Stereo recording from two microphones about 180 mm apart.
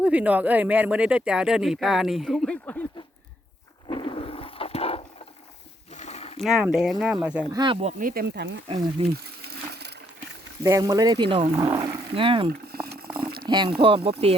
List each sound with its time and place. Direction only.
0.0 s speech: 5° right (ahead or behind)
3.8 s a sound: 25° left (ahead or behind)
6.4 s speech: 5° right (ahead or behind)
7.5 s speech: 25° right (ahead or behind); by 8.6 s 75° right (ahead or behind)
8.6 s speech: 35° right (ahead or behind)
9.5 s crushing: 65° right (ahead or behind)
10.6 s speech: 20° right (ahead or behind)
12.6 s a sound: 60° right (ahead or behind)
13.4 s speech: 25° right (ahead or behind)